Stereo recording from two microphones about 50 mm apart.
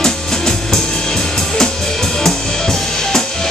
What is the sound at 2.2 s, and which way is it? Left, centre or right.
Drum kit, centre.